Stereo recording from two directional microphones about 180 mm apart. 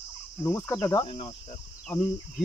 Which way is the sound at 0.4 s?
10° left (ahead or behind).